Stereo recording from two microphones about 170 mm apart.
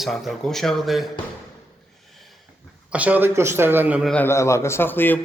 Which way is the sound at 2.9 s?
10° right (ahead or behind).